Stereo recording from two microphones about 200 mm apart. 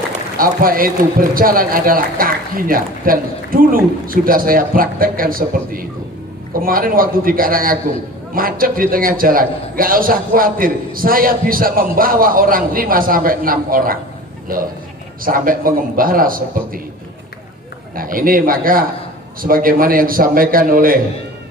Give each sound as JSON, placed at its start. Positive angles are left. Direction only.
{"t": 0.1, "sound": "a man's voice", "side_deg": -45}
{"t": 15.2, "sound": "a man's voice", "side_deg": -45}
{"t": 17.9, "sound": "a man's voice", "side_deg": -45}